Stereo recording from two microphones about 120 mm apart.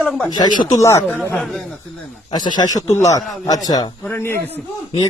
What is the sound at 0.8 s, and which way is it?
Speech, 25° left (ahead or behind).